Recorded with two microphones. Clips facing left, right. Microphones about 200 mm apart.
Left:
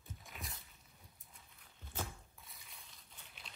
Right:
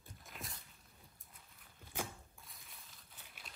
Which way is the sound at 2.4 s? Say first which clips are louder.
Even; centre (ahead or behind).